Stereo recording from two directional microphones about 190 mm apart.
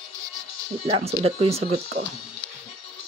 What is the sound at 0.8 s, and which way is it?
Speech, 30° right (ahead or behind).